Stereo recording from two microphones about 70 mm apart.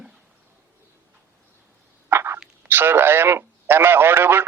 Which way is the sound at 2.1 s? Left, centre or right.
Right.